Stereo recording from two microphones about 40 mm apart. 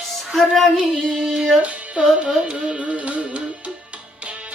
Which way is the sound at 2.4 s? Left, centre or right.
Right.